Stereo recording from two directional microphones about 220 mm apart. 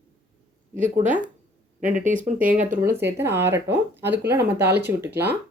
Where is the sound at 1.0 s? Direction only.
5° right (ahead or behind).